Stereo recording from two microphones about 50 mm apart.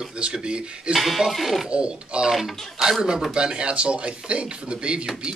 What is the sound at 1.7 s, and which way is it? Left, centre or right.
Speech, centre.